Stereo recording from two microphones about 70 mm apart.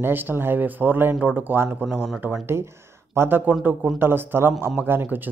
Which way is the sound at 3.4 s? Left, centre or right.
Right.